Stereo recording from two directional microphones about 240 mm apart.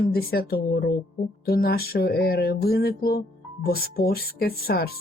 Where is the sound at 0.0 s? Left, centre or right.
Left.